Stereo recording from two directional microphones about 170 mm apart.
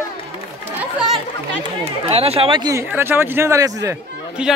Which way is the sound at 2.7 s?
15° right (ahead or behind).